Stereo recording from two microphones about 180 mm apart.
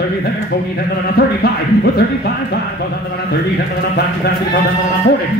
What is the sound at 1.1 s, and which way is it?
Speech, 60° left (ahead or behind).